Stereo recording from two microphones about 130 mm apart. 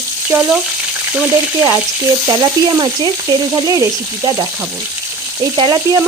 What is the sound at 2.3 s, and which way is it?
Frying, 30° right (ahead or behind).